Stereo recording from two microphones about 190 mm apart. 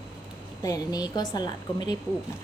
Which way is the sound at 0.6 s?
20° left (ahead or behind).